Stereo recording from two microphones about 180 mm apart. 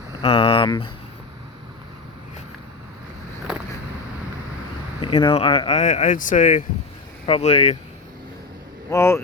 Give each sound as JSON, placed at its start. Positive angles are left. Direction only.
{"t": 0.2, "sound": "speech", "side_deg": 30}
{"t": 3.5, "sound": "vehicle", "side_deg": -5}
{"t": 4.9, "sound": "speech", "side_deg": 25}
{"t": 7.3, "sound": "speech", "side_deg": 35}
{"t": 8.9, "sound": "speech", "side_deg": 15}